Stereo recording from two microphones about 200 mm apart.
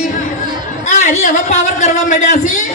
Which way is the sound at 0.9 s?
35° left (ahead or behind).